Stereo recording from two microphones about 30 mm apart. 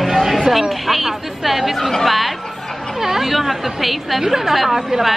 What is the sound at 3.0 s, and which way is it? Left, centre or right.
A woman's voice, centre.